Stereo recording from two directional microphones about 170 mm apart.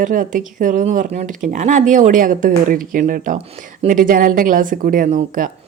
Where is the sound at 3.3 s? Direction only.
35° right (ahead or behind); by 5.5 s 50° right (ahead or behind).